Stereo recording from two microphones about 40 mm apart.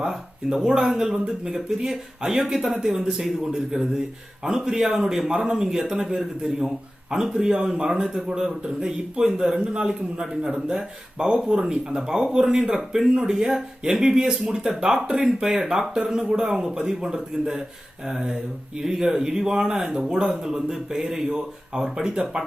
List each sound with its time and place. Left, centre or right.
0.0 s speech: centre